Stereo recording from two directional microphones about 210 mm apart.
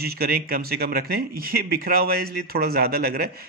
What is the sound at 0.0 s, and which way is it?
A man's voice, 45° right (ahead or behind).